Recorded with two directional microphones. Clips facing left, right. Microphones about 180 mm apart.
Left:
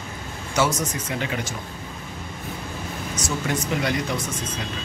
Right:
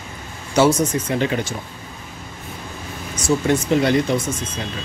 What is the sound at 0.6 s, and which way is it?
Speech, 30° right (ahead or behind).